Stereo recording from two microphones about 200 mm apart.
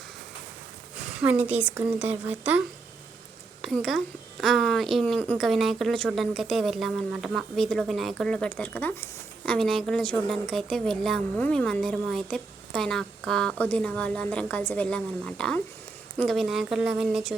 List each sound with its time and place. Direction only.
0.9 s a woman's voice: 5° right (ahead or behind)